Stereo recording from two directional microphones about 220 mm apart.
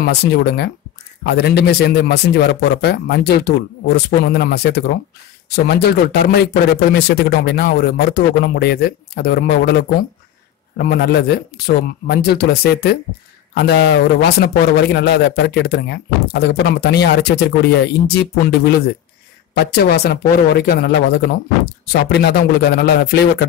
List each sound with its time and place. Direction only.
0.0 s a man's voice: 50° left (ahead or behind)
21.9 s a man's voice: 50° left (ahead or behind)